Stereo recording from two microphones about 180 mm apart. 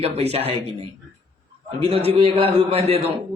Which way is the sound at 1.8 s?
35° right (ahead or behind).